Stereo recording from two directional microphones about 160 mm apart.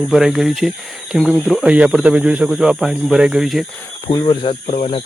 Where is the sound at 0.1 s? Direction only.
Centre (ahead or behind).